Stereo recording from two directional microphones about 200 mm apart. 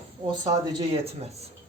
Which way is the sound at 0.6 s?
20° right (ahead or behind).